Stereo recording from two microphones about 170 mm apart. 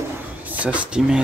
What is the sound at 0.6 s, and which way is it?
Speech, 5° right (ahead or behind).